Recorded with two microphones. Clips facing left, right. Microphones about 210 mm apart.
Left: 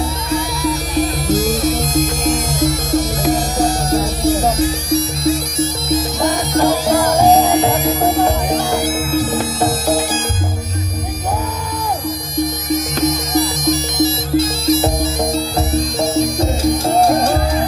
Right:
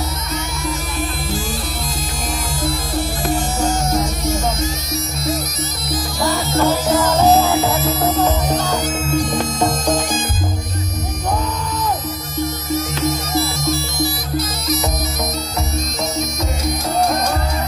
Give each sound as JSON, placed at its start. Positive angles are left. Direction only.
{"t": 0.3, "sound": "music", "side_deg": 35}
{"t": 12.4, "sound": "music", "side_deg": 15}